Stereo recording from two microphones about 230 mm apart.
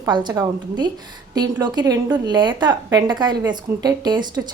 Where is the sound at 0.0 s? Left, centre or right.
Centre.